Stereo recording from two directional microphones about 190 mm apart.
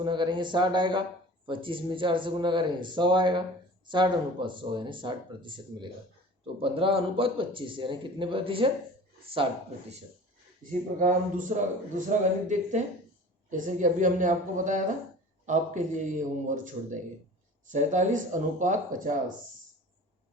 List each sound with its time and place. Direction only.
0.0 s speech: 25° right (ahead or behind)
10.6 s a man's voice: 45° right (ahead or behind)